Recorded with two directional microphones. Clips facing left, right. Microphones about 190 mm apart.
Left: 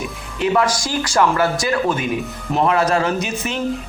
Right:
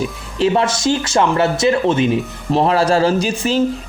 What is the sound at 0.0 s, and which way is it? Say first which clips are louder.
Speech: right 4 dB; 30° right (ahead or behind).